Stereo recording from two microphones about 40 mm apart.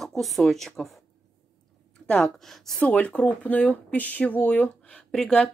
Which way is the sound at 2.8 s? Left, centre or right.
Left.